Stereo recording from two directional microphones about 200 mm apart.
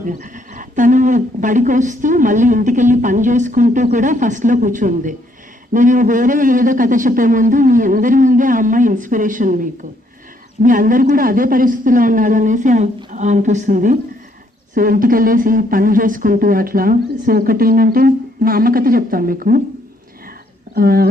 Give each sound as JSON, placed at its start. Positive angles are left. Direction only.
{"t": 0.0, "sound": "speech", "side_deg": -40}
{"t": 20.7, "sound": "speech", "side_deg": -50}